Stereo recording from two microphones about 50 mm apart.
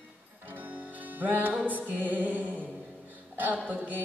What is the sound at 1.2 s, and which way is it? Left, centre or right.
Music, right.